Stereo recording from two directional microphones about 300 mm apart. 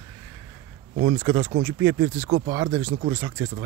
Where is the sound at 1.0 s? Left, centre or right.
Right.